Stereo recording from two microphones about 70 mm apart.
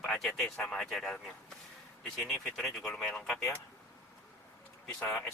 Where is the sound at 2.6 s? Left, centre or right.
Centre.